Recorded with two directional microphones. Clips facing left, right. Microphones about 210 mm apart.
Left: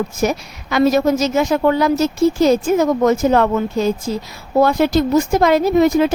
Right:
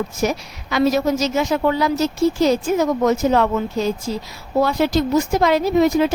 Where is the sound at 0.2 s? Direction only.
50° left (ahead or behind).